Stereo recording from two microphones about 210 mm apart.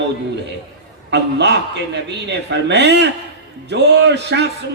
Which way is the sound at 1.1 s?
55° right (ahead or behind).